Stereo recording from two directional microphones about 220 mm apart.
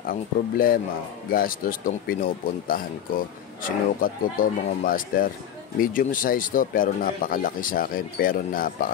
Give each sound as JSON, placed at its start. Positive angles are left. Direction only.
{"t": 0.1, "sound": "speech", "side_deg": 40}
{"t": 3.6, "sound": "speech", "side_deg": 40}